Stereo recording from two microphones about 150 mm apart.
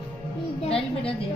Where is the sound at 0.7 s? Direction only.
40° left (ahead or behind).